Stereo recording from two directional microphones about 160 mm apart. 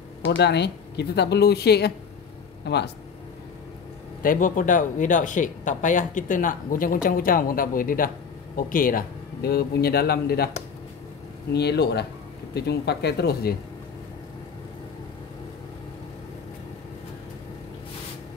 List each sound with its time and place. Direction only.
0.4 s speech: 90° left
4.2 s a man's voice: 60° left (ahead or behind); by 10.5 s 75° left (ahead or behind)
11.5 s speech: 90° left